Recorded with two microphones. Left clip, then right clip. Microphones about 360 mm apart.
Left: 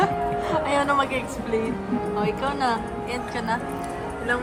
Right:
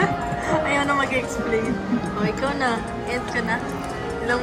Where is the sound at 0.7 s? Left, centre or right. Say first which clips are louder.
Left 1 dB; centre.